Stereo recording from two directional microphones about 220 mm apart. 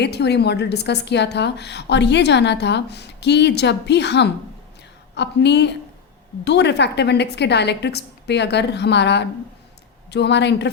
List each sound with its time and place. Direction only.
0.0 s a woman's voice: 50° left (ahead or behind)